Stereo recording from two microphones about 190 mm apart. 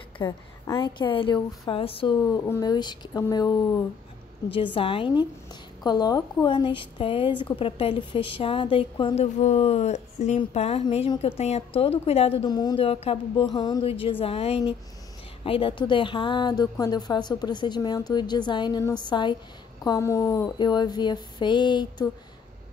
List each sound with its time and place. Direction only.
0.2 s speech: 20° left (ahead or behind)
2.4 s speech: 15° left (ahead or behind)
4.7 s speech: 30° left (ahead or behind)